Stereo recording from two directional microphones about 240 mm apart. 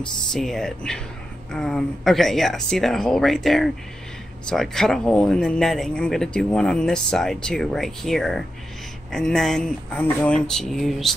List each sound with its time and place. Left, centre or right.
0.3 s speech: centre